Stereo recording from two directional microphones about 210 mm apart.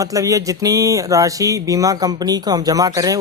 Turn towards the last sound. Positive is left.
turn(degrees=-15)  # may be behind; listen again after turning